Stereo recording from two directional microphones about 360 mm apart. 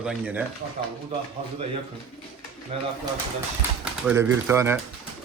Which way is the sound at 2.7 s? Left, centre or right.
Centre.